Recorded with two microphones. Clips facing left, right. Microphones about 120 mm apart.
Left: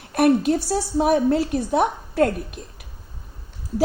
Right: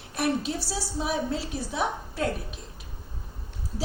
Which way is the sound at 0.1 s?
55° left (ahead or behind).